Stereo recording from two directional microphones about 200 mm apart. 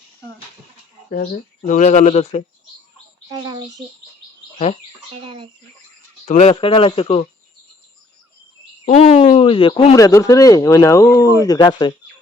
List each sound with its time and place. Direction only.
1.1 s speech: 45° left (ahead or behind)
3.2 s bird: 20° right (ahead or behind)
4.5 s speech: 35° left (ahead or behind)
5.2 s speech: 25° right (ahead or behind)
6.2 s speech: 35° left (ahead or behind)
8.8 s speech: 30° left (ahead or behind)